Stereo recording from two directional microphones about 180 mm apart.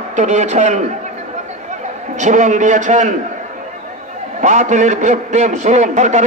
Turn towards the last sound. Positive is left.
turn(degrees=-40)  # may be behind; listen again after turning